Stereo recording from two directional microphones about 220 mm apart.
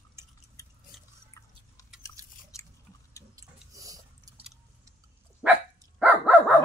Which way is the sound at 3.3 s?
15° right (ahead or behind).